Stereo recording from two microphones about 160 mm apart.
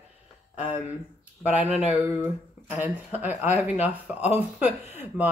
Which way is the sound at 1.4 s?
10° right (ahead or behind).